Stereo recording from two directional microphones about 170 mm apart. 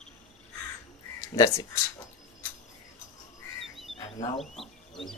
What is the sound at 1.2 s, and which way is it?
Speech, 15° left (ahead or behind).